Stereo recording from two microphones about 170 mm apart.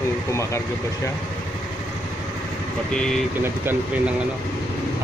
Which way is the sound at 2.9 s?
5° left (ahead or behind).